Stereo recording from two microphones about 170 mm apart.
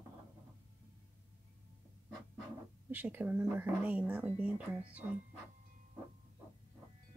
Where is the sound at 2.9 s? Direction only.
10° right (ahead or behind).